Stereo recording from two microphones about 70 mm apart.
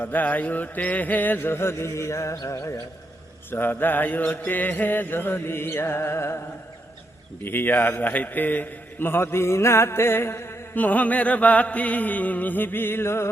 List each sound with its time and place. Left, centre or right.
0.0 s mantra: left
2.3 s music: left
3.5 s mantra: left
7.4 s a man's voice: left
10.8 s mantra: left